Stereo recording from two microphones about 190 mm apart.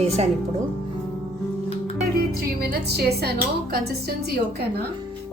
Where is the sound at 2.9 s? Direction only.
55° right (ahead or behind).